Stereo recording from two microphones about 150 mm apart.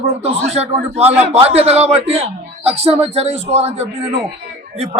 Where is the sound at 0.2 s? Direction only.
45° right (ahead or behind).